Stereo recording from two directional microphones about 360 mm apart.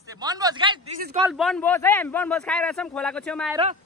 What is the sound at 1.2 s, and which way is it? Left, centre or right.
A man's voice, centre.